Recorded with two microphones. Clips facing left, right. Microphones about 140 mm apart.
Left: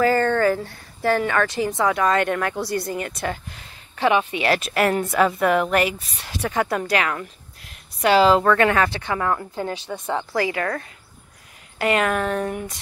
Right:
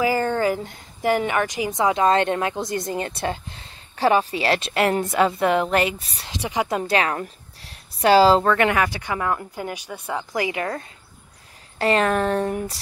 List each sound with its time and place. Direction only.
0.0 s a woman's voice: 10° right (ahead or behind); by 6.3 s 30° right (ahead or behind)
6.4 s speech: 15° right (ahead or behind)
6.8 s a woman's voice: 30° right (ahead or behind)
8.5 s speech: 20° right (ahead or behind)
11.8 s speech: 35° right (ahead or behind)